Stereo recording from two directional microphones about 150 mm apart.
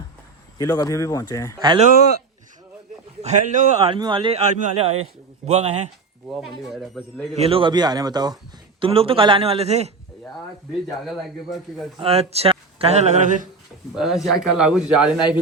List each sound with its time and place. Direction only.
0.6 s speech: 25° left (ahead or behind)
1.5 s speech: 30° right (ahead or behind)
3.2 s speech: 45° right (ahead or behind)
3.9 s speech: 30° right (ahead or behind)
4.4 s speech: 45° right (ahead or behind)
6.2 s a man's voice: centre (ahead or behind)
7.3 s speech: 40° right (ahead or behind)
8.8 s speech: 40° right (ahead or behind)
10.9 s a man's voice: centre (ahead or behind)
11.9 s speech: 40° right (ahead or behind); by 13.5 s 55° right (ahead or behind)
13.9 s a man's voice: centre (ahead or behind)